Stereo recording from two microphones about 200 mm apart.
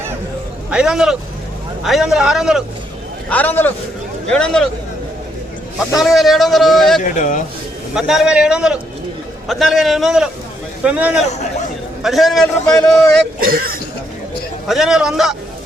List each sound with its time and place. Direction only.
0.7 s a man's voice: 5° right (ahead or behind)
3.2 s a man's voice: 10° left (ahead or behind)
6.0 s a man's voice: centre (ahead or behind)
7.0 s speech: 40° left (ahead or behind)
7.9 s a man's voice: centre (ahead or behind)
13.4 s speech: 45° right (ahead or behind)
14.7 s a man's voice: centre (ahead or behind)